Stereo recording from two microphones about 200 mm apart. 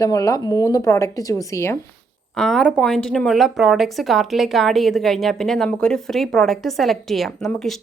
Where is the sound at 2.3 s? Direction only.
Centre (ahead or behind).